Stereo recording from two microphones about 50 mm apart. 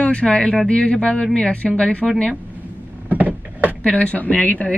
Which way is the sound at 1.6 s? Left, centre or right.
Centre.